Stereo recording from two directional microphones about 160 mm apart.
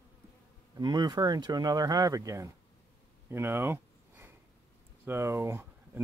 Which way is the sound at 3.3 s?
15° right (ahead or behind).